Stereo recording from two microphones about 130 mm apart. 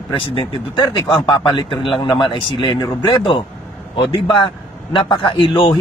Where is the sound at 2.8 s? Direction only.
30° left (ahead or behind).